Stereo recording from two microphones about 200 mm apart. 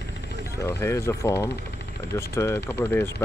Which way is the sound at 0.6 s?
15° left (ahead or behind).